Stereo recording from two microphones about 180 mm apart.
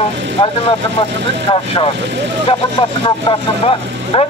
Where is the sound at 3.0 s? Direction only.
30° left (ahead or behind).